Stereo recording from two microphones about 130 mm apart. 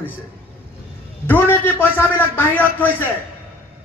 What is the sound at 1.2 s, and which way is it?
A man's voice, 15° left (ahead or behind).